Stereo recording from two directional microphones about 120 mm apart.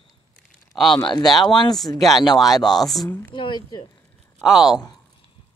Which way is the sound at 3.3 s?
40° left (ahead or behind).